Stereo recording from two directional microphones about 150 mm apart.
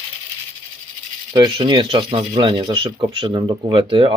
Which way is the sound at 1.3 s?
30° right (ahead or behind).